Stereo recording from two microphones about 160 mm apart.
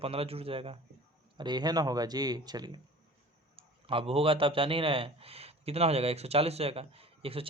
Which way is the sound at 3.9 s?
35° right (ahead or behind).